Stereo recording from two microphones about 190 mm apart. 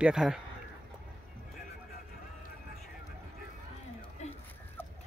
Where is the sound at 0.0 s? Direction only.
5° right (ahead or behind).